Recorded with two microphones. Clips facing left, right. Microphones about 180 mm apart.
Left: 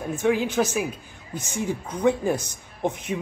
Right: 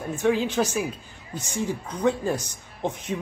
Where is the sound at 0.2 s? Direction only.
10° left (ahead or behind).